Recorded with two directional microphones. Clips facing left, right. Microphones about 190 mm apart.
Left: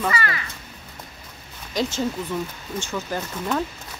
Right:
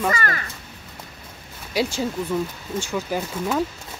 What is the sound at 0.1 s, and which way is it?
Speech, 45° right (ahead or behind).